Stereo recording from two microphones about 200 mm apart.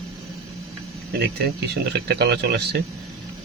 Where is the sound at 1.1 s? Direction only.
50° right (ahead or behind).